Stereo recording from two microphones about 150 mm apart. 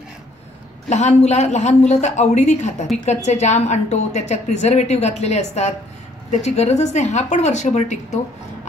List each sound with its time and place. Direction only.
0.8 s a woman's voice: 50° left (ahead or behind)